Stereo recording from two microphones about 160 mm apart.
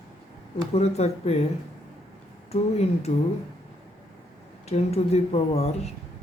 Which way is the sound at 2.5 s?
40° left (ahead or behind).